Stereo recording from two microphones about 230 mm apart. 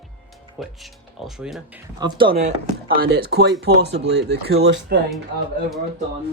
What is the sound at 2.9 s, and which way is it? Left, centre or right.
Speech, right.